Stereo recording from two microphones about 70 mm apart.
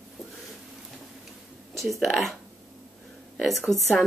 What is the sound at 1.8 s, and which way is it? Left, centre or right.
Speech, centre.